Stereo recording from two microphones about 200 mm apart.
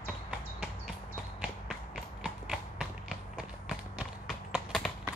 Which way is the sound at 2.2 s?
5° right (ahead or behind).